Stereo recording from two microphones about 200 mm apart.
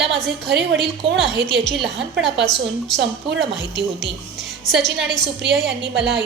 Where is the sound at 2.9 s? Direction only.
65° right (ahead or behind).